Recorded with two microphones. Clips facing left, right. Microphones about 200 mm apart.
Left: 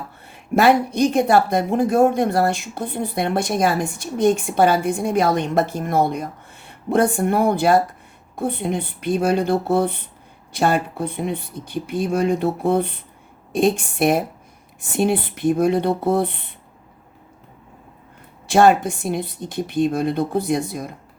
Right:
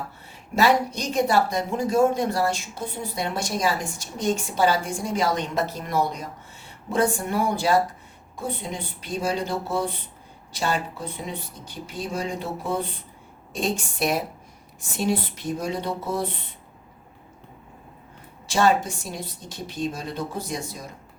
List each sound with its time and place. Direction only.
0.3 s speech: 55° left (ahead or behind)
18.4 s speech: 55° left (ahead or behind)